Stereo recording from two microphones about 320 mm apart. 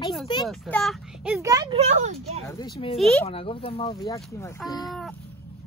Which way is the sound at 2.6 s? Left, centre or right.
Centre.